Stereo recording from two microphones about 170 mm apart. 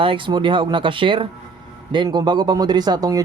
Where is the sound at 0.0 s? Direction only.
30° right (ahead or behind).